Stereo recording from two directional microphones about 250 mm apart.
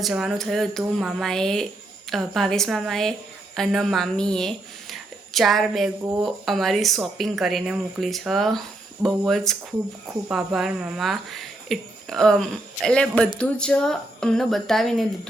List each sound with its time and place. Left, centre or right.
0.0 s a woman's voice: centre